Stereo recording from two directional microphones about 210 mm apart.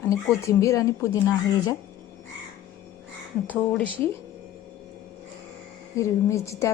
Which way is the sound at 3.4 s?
5° left (ahead or behind).